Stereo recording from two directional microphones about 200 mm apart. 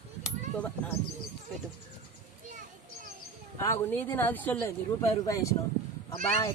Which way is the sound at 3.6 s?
10° left (ahead or behind).